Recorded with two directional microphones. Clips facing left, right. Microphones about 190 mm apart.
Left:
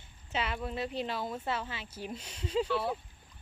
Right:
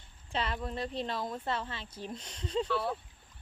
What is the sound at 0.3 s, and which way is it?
Speech, 5° left (ahead or behind).